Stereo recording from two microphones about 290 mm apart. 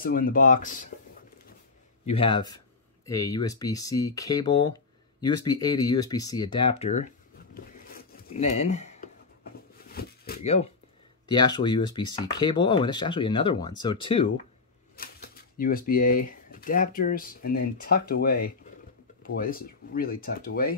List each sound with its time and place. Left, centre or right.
0.0 s speech: left
2.0 s speech: centre
7.5 s a sound: left
11.2 s speech: centre
15.0 s speech: left